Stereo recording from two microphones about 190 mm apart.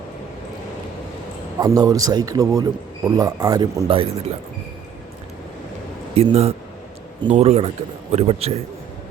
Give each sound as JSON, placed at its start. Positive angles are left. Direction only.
{"t": 1.5, "sound": "a man's voice", "side_deg": -20}
{"t": 6.1, "sound": "a man's voice", "side_deg": -35}